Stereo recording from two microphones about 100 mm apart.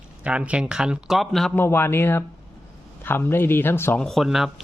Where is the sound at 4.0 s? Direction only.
Centre (ahead or behind).